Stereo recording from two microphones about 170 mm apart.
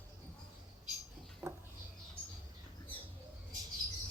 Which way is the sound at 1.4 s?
20° right (ahead or behind).